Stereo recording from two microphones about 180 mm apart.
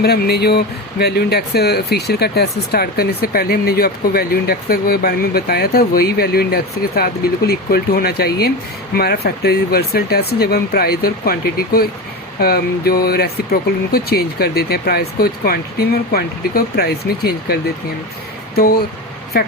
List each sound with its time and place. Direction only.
0.0 s speech: 65° left (ahead or behind)